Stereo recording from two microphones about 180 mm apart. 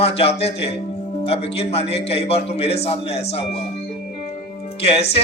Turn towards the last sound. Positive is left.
turn(degrees=35)  # may be behind; listen again after turning